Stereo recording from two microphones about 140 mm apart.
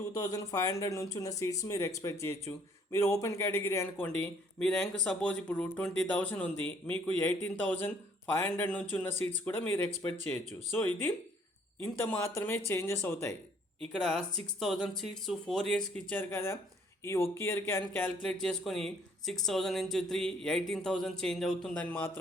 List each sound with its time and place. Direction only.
0.3 s speech: 25° left (ahead or behind)
4.0 s speech: 5° left (ahead or behind)
13.9 s speech: 5° left (ahead or behind)
18.2 s speech: 5° left (ahead or behind)